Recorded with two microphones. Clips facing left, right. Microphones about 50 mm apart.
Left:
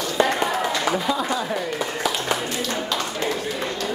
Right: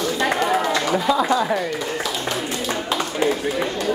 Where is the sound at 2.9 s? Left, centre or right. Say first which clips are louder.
Right 4 dB; centre.